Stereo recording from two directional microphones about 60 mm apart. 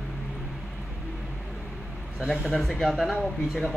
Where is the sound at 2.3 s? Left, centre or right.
Centre.